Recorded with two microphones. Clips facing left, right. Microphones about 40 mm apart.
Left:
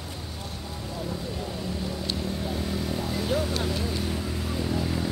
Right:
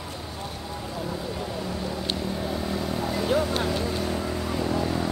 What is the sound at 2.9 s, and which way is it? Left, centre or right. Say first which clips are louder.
Vehicle: right 4 dB; centre.